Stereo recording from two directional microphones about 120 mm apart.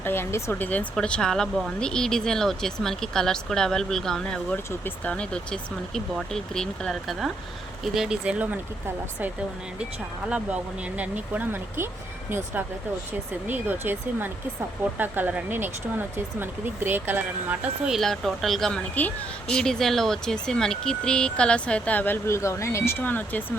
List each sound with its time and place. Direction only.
0.0 s speech: 20° left (ahead or behind)
0.7 s speech: 10° left (ahead or behind); by 8.5 s 10° right (ahead or behind)
10.2 s speech: 10° right (ahead or behind)
13.5 s speech: 15° right (ahead or behind)
17.9 s speech: centre (ahead or behind)